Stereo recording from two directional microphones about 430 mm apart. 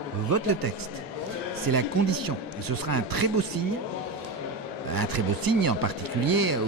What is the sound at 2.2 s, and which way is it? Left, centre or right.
A man's voice, right.